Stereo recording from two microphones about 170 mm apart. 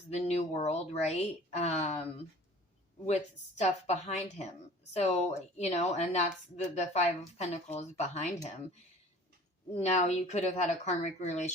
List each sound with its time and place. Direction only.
0.1 s a woman's voice: 40° left (ahead or behind)
3.6 s a woman's voice: 40° left (ahead or behind)
9.7 s a woman's voice: 40° left (ahead or behind)